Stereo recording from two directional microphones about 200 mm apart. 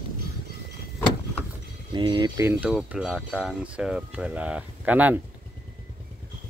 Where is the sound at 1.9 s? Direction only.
25° right (ahead or behind).